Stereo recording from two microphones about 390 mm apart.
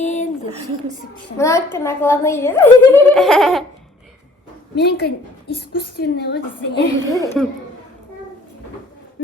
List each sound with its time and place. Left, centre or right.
0.0 s a sound: centre
1.4 s a woman's voice: centre
3.2 s laughter: centre
4.7 s a woman's voice: left
7.1 s a woman's voice: centre